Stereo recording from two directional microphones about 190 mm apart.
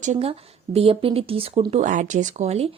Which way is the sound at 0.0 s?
35° right (ahead or behind).